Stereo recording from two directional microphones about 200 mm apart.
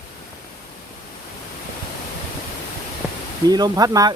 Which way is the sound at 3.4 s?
20° right (ahead or behind).